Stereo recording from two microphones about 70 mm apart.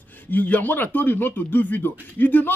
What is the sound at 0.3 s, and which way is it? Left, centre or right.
Speech, left.